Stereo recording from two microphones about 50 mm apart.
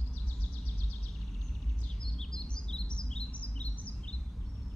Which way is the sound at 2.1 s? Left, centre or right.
Centre.